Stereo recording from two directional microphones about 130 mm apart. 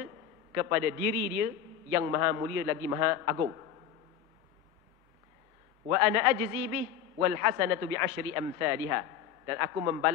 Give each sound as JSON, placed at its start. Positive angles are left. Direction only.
{"t": 0.6, "sound": "a man's voice", "side_deg": -20}
{"t": 5.9, "sound": "a man's voice", "side_deg": -20}